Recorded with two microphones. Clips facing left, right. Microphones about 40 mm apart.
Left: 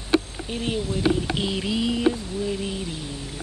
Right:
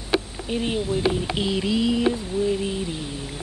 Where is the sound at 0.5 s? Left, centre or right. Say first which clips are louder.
Right 3 dB; centre.